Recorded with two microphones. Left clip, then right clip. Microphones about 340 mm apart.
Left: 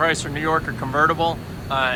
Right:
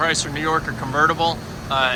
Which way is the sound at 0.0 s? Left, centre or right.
Centre.